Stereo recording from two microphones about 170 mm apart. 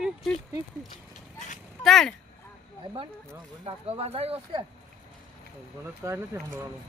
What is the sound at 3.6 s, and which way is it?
Speech, 35° right (ahead or behind).